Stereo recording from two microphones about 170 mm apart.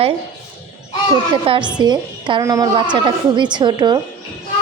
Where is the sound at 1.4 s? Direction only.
30° right (ahead or behind).